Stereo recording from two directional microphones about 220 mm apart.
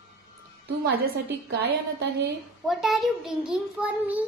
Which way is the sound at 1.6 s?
50° right (ahead or behind).